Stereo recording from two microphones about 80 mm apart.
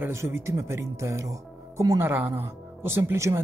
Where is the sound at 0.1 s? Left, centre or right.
Right.